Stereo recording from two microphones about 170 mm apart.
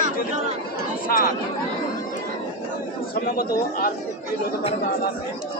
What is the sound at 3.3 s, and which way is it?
Speech, 60° left (ahead or behind).